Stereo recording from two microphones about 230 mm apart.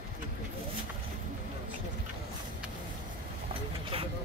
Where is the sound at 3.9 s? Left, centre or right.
Right.